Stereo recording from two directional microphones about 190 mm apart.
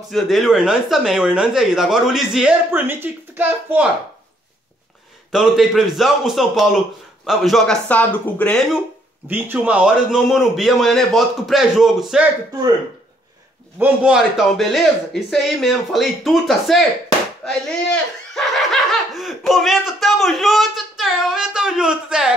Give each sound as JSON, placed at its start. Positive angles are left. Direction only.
{"t": 0.1, "sound": "speech", "side_deg": 0}
{"t": 5.3, "sound": "speech", "side_deg": 0}
{"t": 9.3, "sound": "speech", "side_deg": -10}
{"t": 13.7, "sound": "speech", "side_deg": -5}
{"t": 18.3, "sound": "speech", "side_deg": 0}